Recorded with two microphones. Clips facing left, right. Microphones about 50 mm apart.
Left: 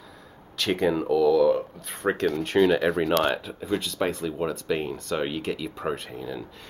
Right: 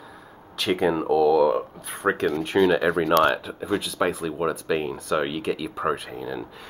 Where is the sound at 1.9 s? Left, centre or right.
Centre.